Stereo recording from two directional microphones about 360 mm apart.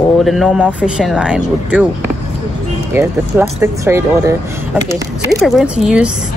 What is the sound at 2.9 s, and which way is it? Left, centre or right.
Speech, centre.